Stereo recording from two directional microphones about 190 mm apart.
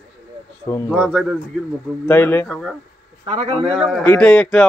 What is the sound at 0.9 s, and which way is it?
Speech, 5° right (ahead or behind).